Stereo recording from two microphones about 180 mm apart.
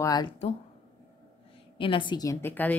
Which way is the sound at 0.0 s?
20° left (ahead or behind).